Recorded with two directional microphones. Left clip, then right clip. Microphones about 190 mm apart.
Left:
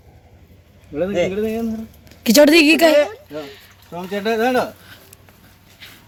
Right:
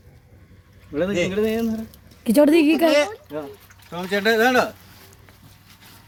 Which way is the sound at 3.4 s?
Centre (ahead or behind).